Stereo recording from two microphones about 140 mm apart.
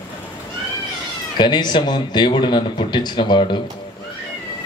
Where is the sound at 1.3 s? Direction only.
35° left (ahead or behind).